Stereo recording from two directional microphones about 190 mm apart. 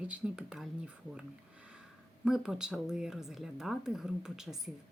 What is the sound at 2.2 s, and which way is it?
Speech, 5° right (ahead or behind).